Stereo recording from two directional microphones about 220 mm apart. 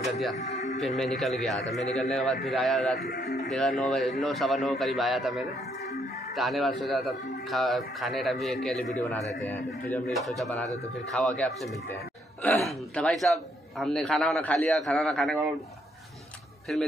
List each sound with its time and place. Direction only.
0.0 s speech: centre (ahead or behind)
0.4 s speech: 30° left (ahead or behind)
0.7 s a man's voice: centre (ahead or behind)
3.2 s speech: 50° left (ahead or behind)
3.4 s a man's voice: centre (ahead or behind)
16.7 s a man's voice: centre (ahead or behind)